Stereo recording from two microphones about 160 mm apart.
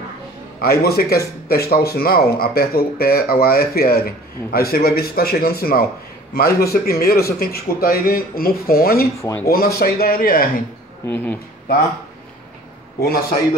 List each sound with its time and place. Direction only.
0.6 s speech: 75° left (ahead or behind)
9.2 s speech: 20° left (ahead or behind)
9.5 s speech: 70° left (ahead or behind)
11.1 s speech: 10° left (ahead or behind)